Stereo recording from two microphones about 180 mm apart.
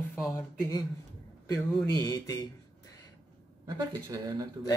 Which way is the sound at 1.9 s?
20° left (ahead or behind).